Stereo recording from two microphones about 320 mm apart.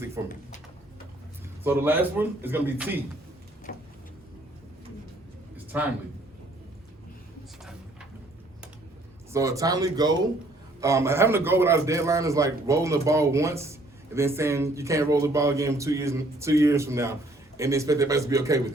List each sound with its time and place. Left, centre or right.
0.2 s a man's voice: centre
1.6 s speech: centre
3.7 s vehicle: left
5.7 s speech: centre
9.3 s a man's voice: centre